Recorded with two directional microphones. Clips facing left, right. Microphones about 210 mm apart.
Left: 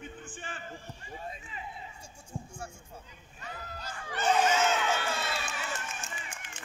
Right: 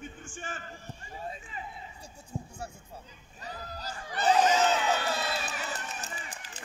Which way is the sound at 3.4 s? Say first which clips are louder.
Right 2 dB; 35° right (ahead or behind).